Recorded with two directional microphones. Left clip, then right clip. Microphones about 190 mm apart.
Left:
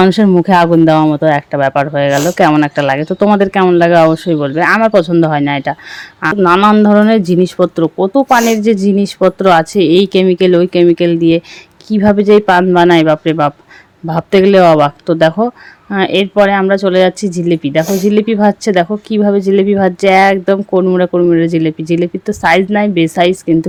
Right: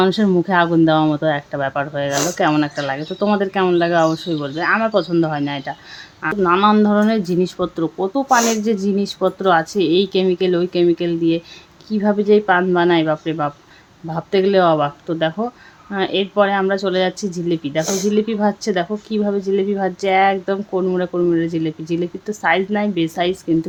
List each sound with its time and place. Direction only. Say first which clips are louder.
0.0 s speech: left 7 dB; 30° left (ahead or behind)